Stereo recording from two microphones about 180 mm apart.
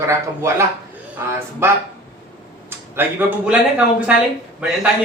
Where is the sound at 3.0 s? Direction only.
10° right (ahead or behind).